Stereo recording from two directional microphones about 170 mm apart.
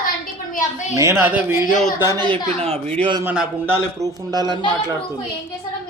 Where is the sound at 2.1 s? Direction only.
30° right (ahead or behind).